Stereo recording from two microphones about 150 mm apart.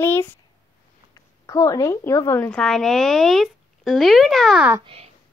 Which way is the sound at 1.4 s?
25° left (ahead or behind).